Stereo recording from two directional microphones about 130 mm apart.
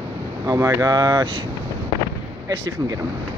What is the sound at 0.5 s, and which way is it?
Speech, 20° right (ahead or behind).